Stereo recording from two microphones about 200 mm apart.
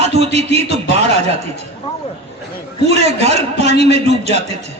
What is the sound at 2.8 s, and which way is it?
A man's voice, 30° right (ahead or behind).